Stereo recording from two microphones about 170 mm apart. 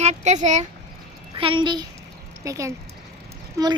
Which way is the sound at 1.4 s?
30° right (ahead or behind).